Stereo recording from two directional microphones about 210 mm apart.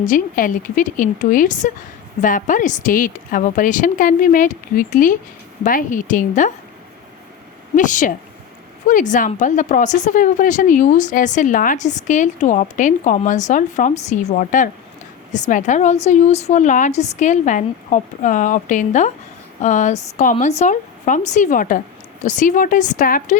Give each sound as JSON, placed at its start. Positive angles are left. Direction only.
{"t": 0.0, "sound": "speech", "side_deg": 40}
{"t": 7.8, "sound": "speech", "side_deg": 35}